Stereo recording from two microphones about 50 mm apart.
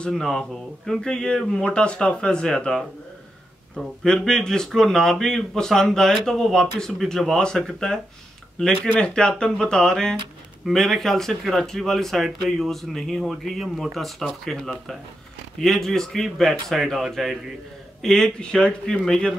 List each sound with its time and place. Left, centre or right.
0.1 s speech: centre
9.0 s speech: left
15.6 s speech: centre
18.0 s speech: centre